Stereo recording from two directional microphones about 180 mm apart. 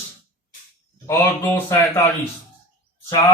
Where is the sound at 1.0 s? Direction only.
10° left (ahead or behind).